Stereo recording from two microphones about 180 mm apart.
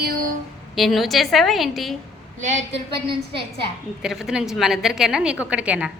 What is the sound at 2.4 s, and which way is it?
Speech, 40° right (ahead or behind).